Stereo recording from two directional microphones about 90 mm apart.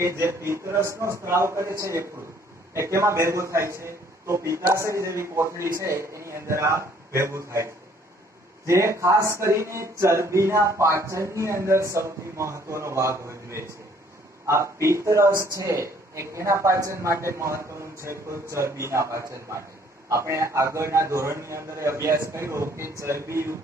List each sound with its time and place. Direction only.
0.0 s speech: 30° right (ahead or behind)